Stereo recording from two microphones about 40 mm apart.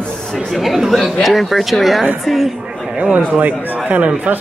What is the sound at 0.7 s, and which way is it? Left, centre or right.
Chatter, centre.